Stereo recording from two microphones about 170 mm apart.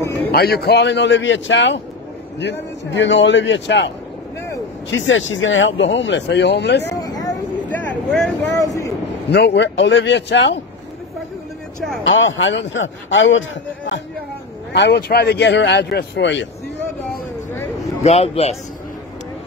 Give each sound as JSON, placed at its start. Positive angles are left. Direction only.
{"t": 0.0, "sound": "a sound", "side_deg": 15}
{"t": 0.3, "sound": "speech", "side_deg": 65}
{"t": 2.9, "sound": "speech", "side_deg": 90}
{"t": 4.9, "sound": "speech", "side_deg": 90}
{"t": 7.0, "sound": "a sound", "side_deg": 20}
{"t": 7.6, "sound": "vehicle", "side_deg": 5}
{"t": 8.5, "sound": "vehicle", "side_deg": 20}
{"t": 9.3, "sound": "speech", "side_deg": 80}
{"t": 12.0, "sound": "speech", "side_deg": 90}
{"t": 18.0, "sound": "speech", "side_deg": 35}